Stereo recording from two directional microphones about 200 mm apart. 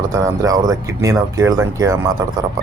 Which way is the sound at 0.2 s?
15° right (ahead or behind).